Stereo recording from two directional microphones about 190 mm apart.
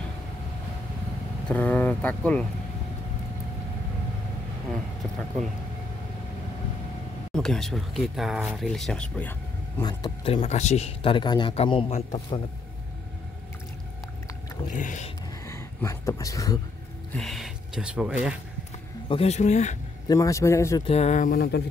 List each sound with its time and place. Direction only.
1.5 s speech: 10° left (ahead or behind)
7.3 s speech: 5° left (ahead or behind)
9.8 s speech: 20° left (ahead or behind)
14.7 s speech: 40° left (ahead or behind)
15.4 s a sound: 15° left (ahead or behind)
17.1 s speech: centre (ahead or behind)
19.0 s speech: 35° left (ahead or behind)
20.1 s speech: 15° left (ahead or behind)
20.8 s speech: 35° left (ahead or behind); by 21.6 s 55° left (ahead or behind)